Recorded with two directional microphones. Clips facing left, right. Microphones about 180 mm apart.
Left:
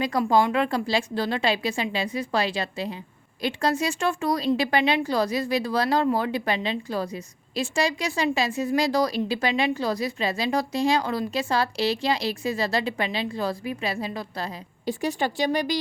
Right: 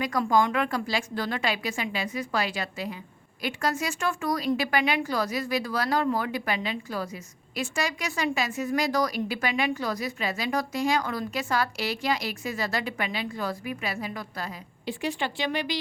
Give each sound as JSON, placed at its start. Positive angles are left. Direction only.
{"t": 0.3, "sound": "a woman's voice", "side_deg": 25}